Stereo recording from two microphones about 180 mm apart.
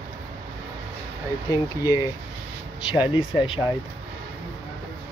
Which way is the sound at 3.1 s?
25° left (ahead or behind).